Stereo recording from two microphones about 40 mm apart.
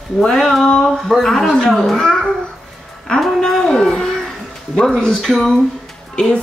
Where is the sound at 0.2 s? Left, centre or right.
Centre.